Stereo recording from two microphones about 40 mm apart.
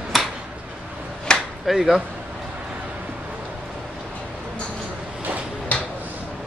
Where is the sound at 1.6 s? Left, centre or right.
Centre.